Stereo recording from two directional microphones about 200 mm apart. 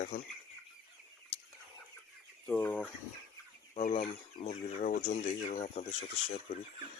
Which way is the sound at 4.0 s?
35° left (ahead or behind).